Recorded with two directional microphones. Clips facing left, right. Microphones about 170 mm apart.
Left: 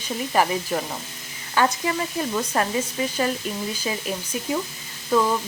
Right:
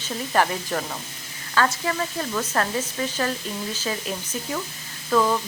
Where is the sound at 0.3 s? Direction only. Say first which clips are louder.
Left 1 dB; 10° left (ahead or behind).